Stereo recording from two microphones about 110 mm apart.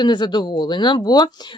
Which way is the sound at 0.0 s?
45° left (ahead or behind).